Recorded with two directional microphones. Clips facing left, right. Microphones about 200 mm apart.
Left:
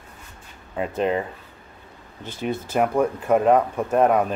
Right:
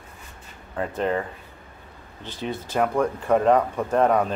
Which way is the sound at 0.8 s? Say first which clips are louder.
Left 2 dB; 15° left (ahead or behind).